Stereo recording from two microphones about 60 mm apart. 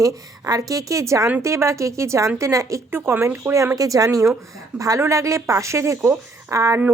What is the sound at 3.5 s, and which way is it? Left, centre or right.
Speech, right.